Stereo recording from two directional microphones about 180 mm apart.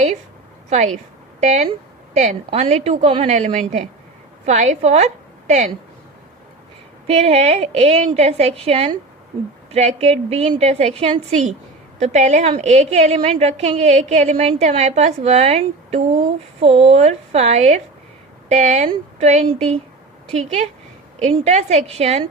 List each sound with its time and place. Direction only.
1.4 s a woman's voice: 40° right (ahead or behind)
7.1 s a woman's voice: 35° right (ahead or behind)